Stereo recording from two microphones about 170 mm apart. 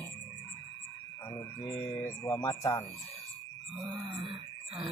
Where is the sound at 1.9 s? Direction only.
15° left (ahead or behind).